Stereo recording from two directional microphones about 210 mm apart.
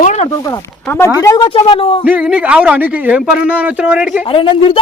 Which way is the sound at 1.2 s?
20° left (ahead or behind).